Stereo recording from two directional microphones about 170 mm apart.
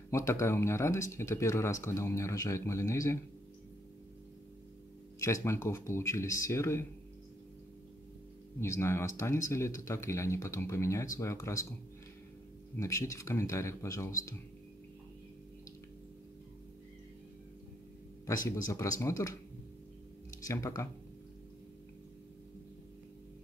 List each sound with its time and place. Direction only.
0.1 s speech: 15° left (ahead or behind)
5.2 s speech: 15° left (ahead or behind)
8.5 s speech: 15° left (ahead or behind)
12.7 s speech: 15° left (ahead or behind)
18.2 s speech: 20° left (ahead or behind)
20.4 s speech: 20° left (ahead or behind)